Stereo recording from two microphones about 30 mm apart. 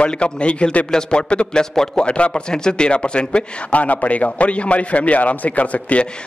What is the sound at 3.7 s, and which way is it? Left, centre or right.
A man's voice, left.